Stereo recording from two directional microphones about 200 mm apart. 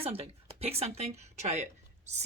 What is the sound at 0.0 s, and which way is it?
Speech, 30° right (ahead or behind).